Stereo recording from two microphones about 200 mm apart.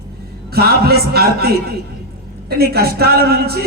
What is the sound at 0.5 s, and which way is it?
Music, 50° right (ahead or behind).